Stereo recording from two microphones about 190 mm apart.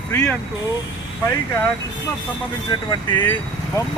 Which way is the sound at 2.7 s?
25° left (ahead or behind).